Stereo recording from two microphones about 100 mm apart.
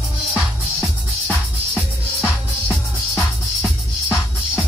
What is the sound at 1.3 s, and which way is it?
Music, 15° left (ahead or behind).